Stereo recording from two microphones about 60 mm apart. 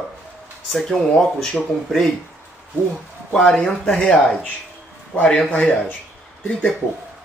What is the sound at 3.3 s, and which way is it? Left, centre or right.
Speech, centre.